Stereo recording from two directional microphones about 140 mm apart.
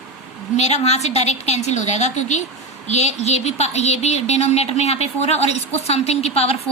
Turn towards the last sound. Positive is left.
turn(degrees=45)  # may be behind; listen again after turning